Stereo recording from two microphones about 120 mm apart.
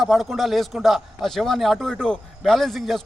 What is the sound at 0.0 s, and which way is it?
A man's voice, centre (ahead or behind).